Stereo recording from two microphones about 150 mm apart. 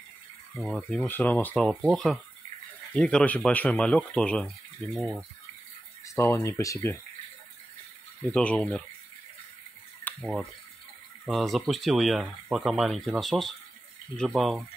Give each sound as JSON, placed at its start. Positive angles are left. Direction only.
{"t": 0.6, "sound": "speech", "side_deg": 5}
{"t": 6.0, "sound": "speech", "side_deg": 20}
{"t": 8.2, "sound": "speech", "side_deg": 5}
{"t": 10.1, "sound": "a sound", "side_deg": 10}
{"t": 11.2, "sound": "speech", "side_deg": 0}